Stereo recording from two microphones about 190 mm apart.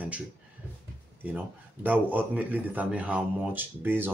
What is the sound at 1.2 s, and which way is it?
Speech, 10° right (ahead or behind).